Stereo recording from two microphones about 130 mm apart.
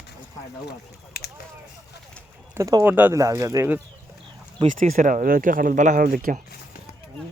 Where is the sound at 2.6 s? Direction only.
25° right (ahead or behind).